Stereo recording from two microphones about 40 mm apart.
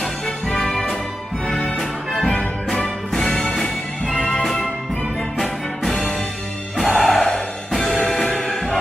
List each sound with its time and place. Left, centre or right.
0.5 s music: centre
4.1 s music: left
5.4 s music: centre